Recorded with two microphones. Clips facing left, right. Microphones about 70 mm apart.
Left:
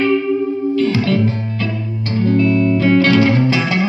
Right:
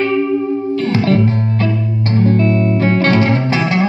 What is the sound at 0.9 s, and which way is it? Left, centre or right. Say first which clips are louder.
Music: right 2 dB; right.